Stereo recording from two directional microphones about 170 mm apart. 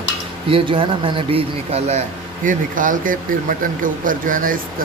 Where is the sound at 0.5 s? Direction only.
30° right (ahead or behind).